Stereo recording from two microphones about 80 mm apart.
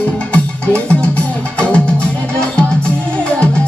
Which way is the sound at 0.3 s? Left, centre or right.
Centre.